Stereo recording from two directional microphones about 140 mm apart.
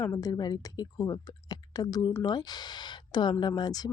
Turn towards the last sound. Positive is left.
turn(degrees=30)  # may be behind; listen again after turning